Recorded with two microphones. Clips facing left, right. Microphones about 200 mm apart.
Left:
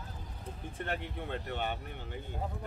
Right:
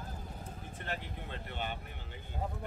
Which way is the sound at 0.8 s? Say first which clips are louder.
Left 5 dB; 55° left (ahead or behind).